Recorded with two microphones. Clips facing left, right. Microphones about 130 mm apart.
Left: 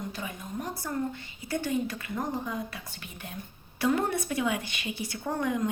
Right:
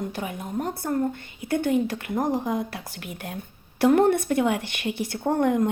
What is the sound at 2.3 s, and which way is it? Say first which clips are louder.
A woman's voice: right 7 dB; 80° right.